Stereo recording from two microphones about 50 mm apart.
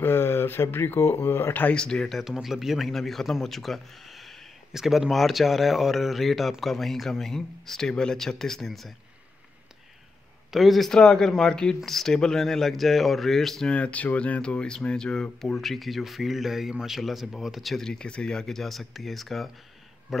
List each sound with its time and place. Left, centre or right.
0.0 s speech: left
1.5 s speech: left
1.8 s speech: centre
2.2 s speech: centre
2.9 s speech: centre
10.5 s speech: centre
10.9 s speech: centre
13.7 s speech: left
15.4 s speech: centre
17.8 s speech: centre